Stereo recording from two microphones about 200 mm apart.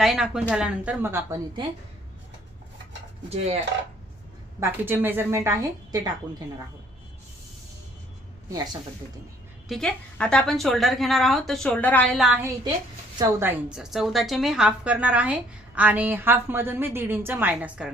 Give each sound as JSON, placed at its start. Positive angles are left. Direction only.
{"t": 0.0, "sound": "a woman's voice", "side_deg": 0}
{"t": 3.2, "sound": "dishes", "side_deg": -30}
{"t": 4.6, "sound": "a woman's voice", "side_deg": -10}
{"t": 8.4, "sound": "a woman's voice", "side_deg": -15}
{"t": 9.6, "sound": "a woman's voice", "side_deg": 0}